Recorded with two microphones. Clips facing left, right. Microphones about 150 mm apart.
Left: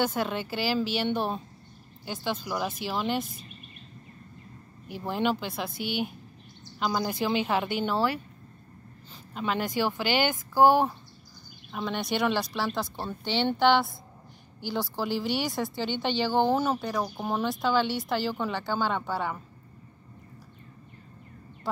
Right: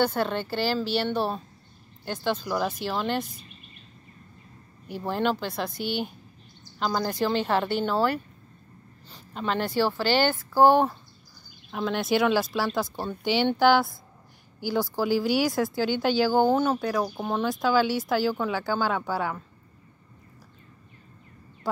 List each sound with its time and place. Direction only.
0.0 s speech: 5° left (ahead or behind)
2.0 s speech: 10° left (ahead or behind)
5.0 s speech: 5° left (ahead or behind)
5.7 s speech: 40° right (ahead or behind)
6.8 s speech: 5° left (ahead or behind)
9.3 s speech: 5° left (ahead or behind)
11.7 s speech: centre (ahead or behind)
16.5 s speech: 5° left (ahead or behind)
16.8 s speech: 5° right (ahead or behind)